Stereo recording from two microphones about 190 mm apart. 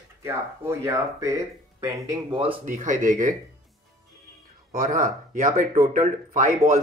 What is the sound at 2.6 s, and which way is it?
Speech, 40° right (ahead or behind).